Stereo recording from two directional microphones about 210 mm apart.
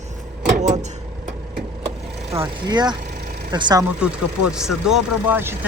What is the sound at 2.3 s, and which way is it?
Speech, 15° right (ahead or behind).